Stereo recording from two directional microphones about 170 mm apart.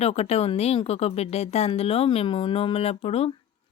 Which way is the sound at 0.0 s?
40° left (ahead or behind).